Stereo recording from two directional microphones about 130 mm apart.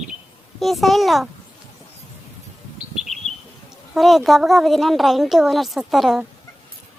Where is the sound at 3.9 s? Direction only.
Centre (ahead or behind).